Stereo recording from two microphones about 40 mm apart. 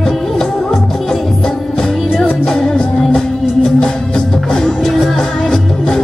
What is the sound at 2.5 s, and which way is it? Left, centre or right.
Music, centre.